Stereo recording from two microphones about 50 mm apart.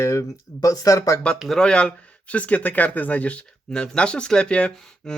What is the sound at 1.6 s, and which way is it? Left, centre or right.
Speech, centre.